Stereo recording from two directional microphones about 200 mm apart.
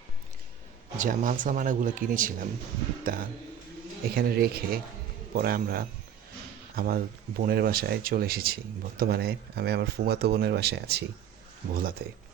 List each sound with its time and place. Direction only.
0.9 s speech: 40° right (ahead or behind)